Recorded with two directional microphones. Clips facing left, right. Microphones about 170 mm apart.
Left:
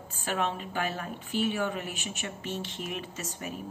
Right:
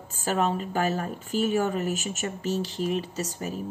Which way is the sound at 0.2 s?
40° right (ahead or behind).